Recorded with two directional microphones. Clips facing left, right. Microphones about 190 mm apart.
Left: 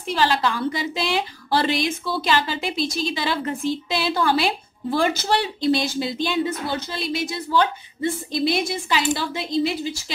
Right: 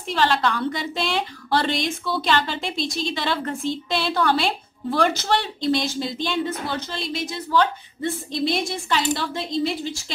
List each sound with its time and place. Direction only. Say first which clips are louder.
0.1 s a woman's voice: even; 5° left (ahead or behind)